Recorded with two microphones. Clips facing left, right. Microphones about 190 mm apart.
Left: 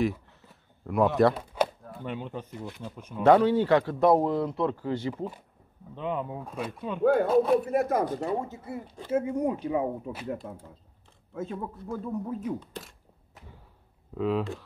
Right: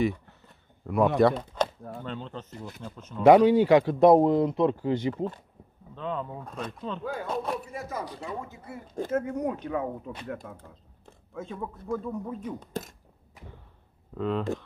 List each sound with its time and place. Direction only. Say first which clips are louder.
0.0 s a sound: right 1 dB; centre (ahead or behind)
2.0 s speech: left 5 dB; 10° left (ahead or behind)
3.3 s speech: right 3 dB; 15° right (ahead or behind)
5.1 s speech: right 3 dB; 10° left (ahead or behind)
7.0 s speech: left 16 dB; 60° left (ahead or behind)
7.2 s speech: left 9 dB; centre (ahead or behind)
7.6 s speech: left 10 dB; 60° left (ahead or behind)
9.1 s speech: left 3 dB; 10° left (ahead or behind)
12.5 s speech: right 4 dB; 45° right (ahead or behind)
14.1 s speech: left 2 dB; 5° left (ahead or behind)